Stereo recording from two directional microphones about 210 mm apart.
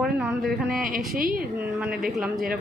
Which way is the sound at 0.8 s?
40° right (ahead or behind).